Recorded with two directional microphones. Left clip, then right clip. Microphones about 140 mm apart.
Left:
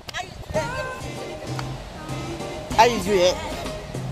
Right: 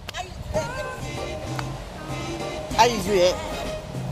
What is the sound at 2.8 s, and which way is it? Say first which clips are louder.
Speech: left 2 dB; 55° left (ahead or behind).